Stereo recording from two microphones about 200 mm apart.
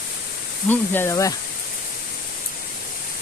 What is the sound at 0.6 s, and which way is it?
Speech, 10° left (ahead or behind).